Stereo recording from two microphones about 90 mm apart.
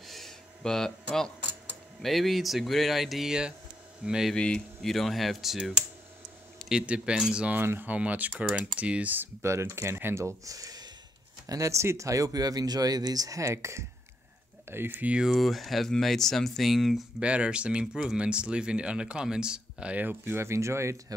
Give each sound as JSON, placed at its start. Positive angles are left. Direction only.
{"t": 0.0, "sound": "a sound", "side_deg": 0}
{"t": 2.0, "sound": "speech", "side_deg": 0}
{"t": 4.3, "sound": "speech", "side_deg": 10}
{"t": 7.5, "sound": "speech", "side_deg": -25}
{"t": 17.2, "sound": "speech", "side_deg": -10}